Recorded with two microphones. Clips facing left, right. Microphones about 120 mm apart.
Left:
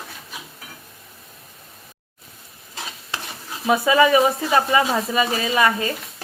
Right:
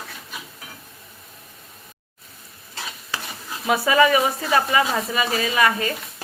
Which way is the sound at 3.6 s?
20° left (ahead or behind).